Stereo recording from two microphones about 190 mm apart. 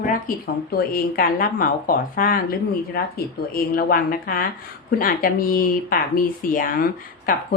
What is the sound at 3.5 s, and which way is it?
A woman's voice, 50° left (ahead or behind).